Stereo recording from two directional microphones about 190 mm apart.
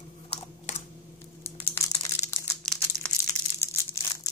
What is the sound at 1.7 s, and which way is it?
Crushing, 15° left (ahead or behind).